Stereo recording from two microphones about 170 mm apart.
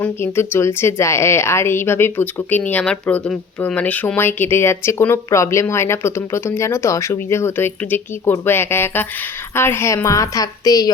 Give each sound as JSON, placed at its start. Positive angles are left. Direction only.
{"t": 0.0, "sound": "a woman's voice", "side_deg": 15}